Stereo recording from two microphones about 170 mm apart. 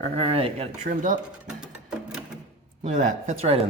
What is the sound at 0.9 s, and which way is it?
Speech, 50° right (ahead or behind).